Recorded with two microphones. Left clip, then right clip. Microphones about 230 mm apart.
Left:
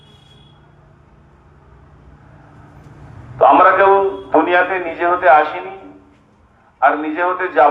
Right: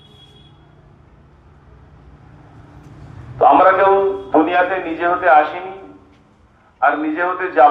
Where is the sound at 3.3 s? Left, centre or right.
Left.